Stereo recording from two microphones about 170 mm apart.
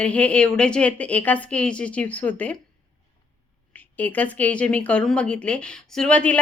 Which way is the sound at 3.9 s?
10° left (ahead or behind).